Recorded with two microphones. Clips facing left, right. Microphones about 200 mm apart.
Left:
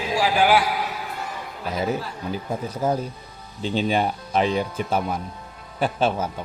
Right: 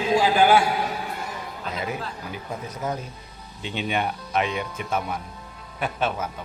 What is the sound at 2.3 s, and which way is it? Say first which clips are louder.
Speech: left 5 dB; 30° left (ahead or behind).